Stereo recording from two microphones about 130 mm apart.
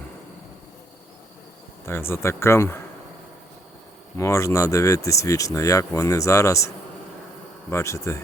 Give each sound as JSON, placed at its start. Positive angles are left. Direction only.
{"t": 1.9, "sound": "speech", "side_deg": 20}
{"t": 4.2, "sound": "speech", "side_deg": 25}
{"t": 7.7, "sound": "speech", "side_deg": 20}